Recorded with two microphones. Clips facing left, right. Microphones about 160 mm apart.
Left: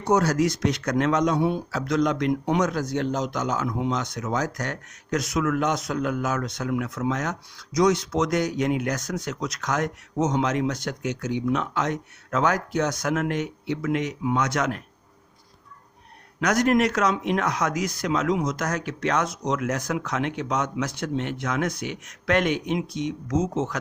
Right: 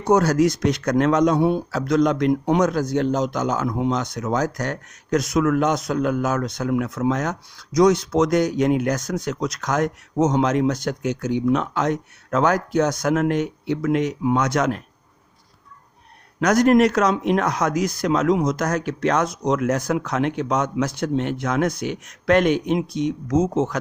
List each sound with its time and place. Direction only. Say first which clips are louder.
0.1 s speech: right 4 dB; 50° right (ahead or behind)
16.4 s speech: right 5 dB; 40° right (ahead or behind)